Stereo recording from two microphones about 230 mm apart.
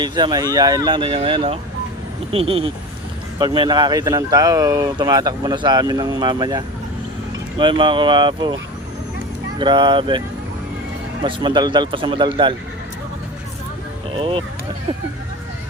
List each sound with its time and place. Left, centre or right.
0.0 s speech: centre
9.6 s speech: centre
14.2 s speech: right